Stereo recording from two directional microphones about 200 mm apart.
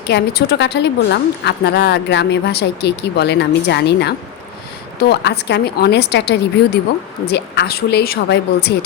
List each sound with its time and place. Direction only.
0.1 s a woman's voice: 55° left (ahead or behind)